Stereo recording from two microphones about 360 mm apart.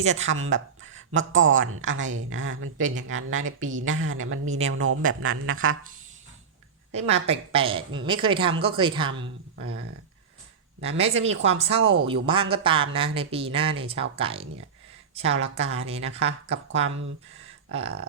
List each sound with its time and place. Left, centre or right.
0.0 s speech: centre
0.3 s speech: right
7.3 s speech: centre
10.8 s speech: centre
11.8 s speech: right
12.0 s speech: centre